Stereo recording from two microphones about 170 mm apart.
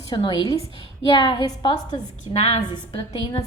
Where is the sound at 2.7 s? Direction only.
25° left (ahead or behind).